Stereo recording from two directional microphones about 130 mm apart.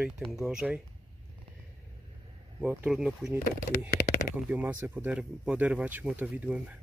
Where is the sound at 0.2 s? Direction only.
Centre (ahead or behind).